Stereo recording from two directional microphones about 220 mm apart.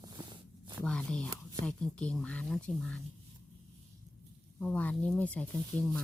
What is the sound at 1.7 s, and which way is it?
Speech, 5° left (ahead or behind).